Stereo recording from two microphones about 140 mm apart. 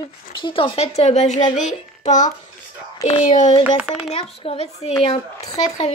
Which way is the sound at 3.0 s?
50° left (ahead or behind).